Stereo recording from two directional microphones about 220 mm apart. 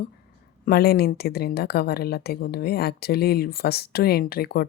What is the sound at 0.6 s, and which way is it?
Speech, 45° left (ahead or behind).